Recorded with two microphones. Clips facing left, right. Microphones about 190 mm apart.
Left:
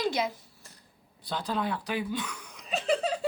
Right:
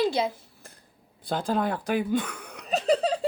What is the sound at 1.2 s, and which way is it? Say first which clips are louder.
A woman's voice: right 5 dB; 50° right (ahead or behind).